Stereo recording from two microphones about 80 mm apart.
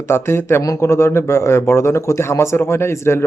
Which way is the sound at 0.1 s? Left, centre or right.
Left.